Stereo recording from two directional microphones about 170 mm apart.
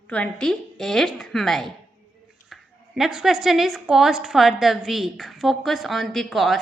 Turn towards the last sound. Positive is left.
turn(degrees=0)  # may be behind; listen again after turning